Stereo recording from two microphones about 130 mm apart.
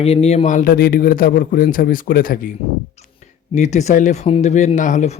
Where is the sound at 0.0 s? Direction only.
55° left (ahead or behind); by 2.5 s 90° left.